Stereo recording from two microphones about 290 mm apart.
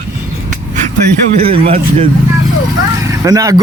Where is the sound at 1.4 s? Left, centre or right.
Centre.